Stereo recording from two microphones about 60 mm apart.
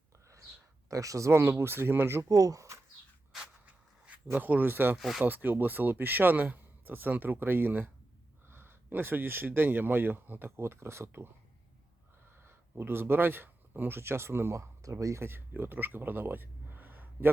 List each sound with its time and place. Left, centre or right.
0.9 s speech: right
1.3 s speech: right
2.3 s speech: right
3.7 s a sound: right
4.4 s speech: right
4.9 s speech: centre
5.2 s speech: right
12.5 s speech: right
15.2 s speech: right